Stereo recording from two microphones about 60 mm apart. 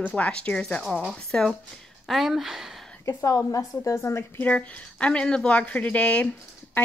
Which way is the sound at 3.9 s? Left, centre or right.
Left.